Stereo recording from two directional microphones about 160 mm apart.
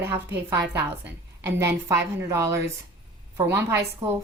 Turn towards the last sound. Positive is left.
turn(degrees=-15)  # may be behind; listen again after turning